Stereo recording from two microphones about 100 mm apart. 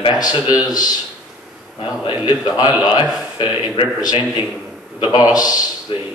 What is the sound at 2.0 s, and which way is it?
Speech, 50° left (ahead or behind).